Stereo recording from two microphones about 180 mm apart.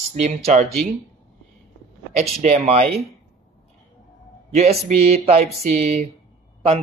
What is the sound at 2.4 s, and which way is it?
Speech, 35° right (ahead or behind).